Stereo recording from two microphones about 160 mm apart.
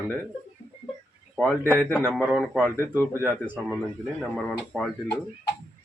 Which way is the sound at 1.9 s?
15° right (ahead or behind).